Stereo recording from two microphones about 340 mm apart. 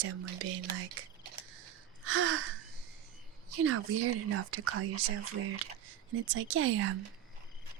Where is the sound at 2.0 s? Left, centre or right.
Right.